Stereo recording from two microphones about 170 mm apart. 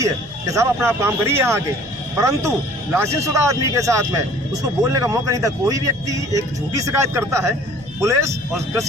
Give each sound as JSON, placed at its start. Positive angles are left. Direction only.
{"t": 0.0, "sound": "speech", "side_deg": -20}
{"t": 2.9, "sound": "a man's voice", "side_deg": -15}